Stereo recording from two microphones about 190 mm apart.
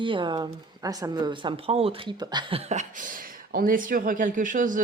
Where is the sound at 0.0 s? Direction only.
25° right (ahead or behind).